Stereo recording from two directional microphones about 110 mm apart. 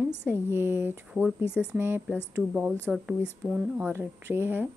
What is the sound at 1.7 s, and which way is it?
Speech, 20° right (ahead or behind).